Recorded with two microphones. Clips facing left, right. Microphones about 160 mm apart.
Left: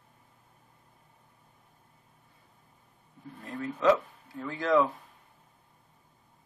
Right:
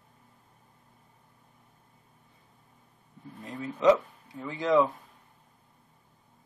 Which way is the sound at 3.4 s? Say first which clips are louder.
Right 2 dB; 15° right (ahead or behind).